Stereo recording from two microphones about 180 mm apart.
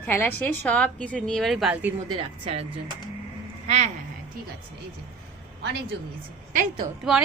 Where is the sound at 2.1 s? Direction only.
35° right (ahead or behind).